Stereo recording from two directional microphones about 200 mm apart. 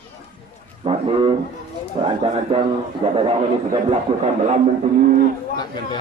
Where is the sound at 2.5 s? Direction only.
30° right (ahead or behind).